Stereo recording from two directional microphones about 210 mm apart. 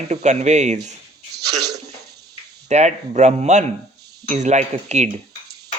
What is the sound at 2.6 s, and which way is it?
Speech, 35° right (ahead or behind).